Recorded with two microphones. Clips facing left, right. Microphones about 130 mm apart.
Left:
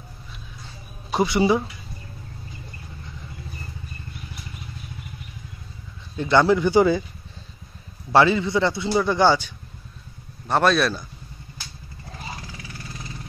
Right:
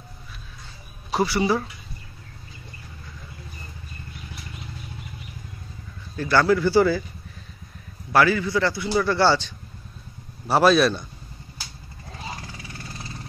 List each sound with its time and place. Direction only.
1.1 s a man's voice: 20° left (ahead or behind)
6.1 s a man's voice: 20° left (ahead or behind)
8.1 s a man's voice: 25° left (ahead or behind)
10.4 s speech: 5° right (ahead or behind)